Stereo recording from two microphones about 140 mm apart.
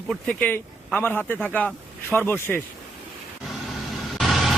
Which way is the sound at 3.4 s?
Centre (ahead or behind).